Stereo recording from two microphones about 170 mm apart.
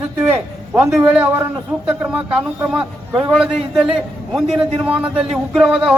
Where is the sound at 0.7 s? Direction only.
10° right (ahead or behind).